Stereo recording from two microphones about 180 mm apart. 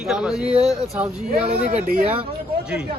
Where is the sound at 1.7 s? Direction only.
55° right (ahead or behind).